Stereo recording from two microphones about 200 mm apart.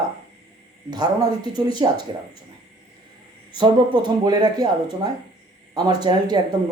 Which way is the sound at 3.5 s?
20° right (ahead or behind).